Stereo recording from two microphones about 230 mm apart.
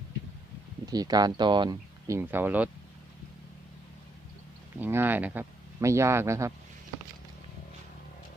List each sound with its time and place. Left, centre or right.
0.9 s speech: centre
4.8 s speech: centre